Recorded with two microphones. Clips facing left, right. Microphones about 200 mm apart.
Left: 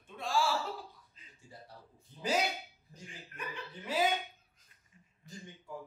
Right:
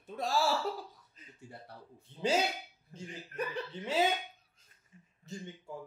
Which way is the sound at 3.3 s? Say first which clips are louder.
Right 8 dB; 40° right (ahead or behind).